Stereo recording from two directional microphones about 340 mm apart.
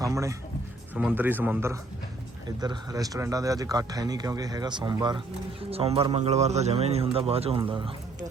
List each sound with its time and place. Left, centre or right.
0.0 s a man's voice: centre